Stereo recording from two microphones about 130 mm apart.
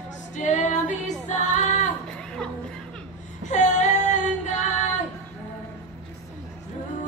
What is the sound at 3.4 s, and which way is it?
Female singing, 70° left (ahead or behind).